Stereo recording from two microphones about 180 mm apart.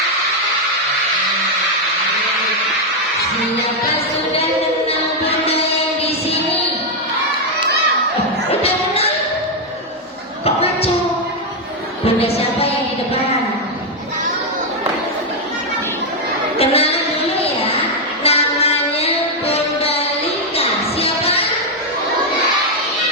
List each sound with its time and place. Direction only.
4.9 s music: 35° left (ahead or behind)
6.0 s child singing: 35° left (ahead or behind)
8.4 s music: 35° left (ahead or behind)
10.4 s a sound: 35° left (ahead or behind)
12.0 s music: 35° left (ahead or behind)
16.6 s a sound: 35° left (ahead or behind)
17.4 s child singing: 35° left (ahead or behind)
20.6 s music: 35° left (ahead or behind)